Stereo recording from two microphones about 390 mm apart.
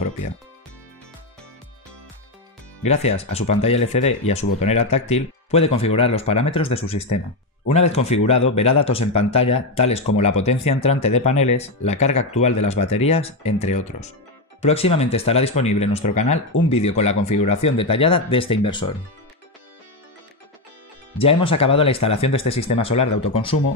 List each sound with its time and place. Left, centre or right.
2.8 s speech: centre
9.0 s speech: left
9.3 s speech: centre
21.2 s speech: centre